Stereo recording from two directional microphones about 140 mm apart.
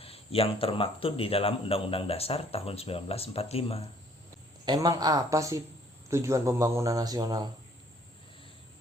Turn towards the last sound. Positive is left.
turn(degrees=-30)  # may be behind; listen again after turning